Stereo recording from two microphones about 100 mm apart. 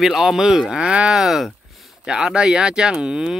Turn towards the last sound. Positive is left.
turn(degrees=-10)  # may be behind; listen again after turning